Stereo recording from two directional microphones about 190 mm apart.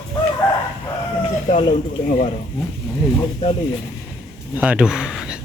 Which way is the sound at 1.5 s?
35° left (ahead or behind).